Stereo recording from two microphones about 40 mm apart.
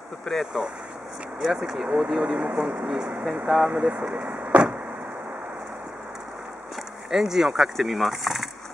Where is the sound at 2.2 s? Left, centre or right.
Right.